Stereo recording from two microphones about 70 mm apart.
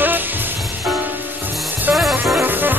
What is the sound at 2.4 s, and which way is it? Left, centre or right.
Music, right.